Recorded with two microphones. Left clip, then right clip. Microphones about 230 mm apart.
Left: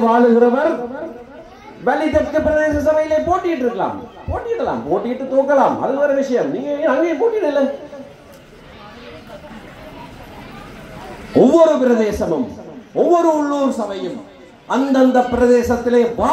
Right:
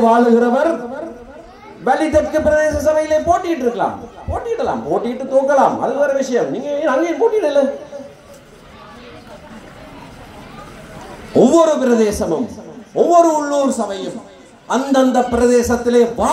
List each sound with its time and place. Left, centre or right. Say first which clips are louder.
0.0 s a man's voice: even; right
1.9 s a man's voice: right 2 dB; right
11.4 s a man's voice: left 1 dB; right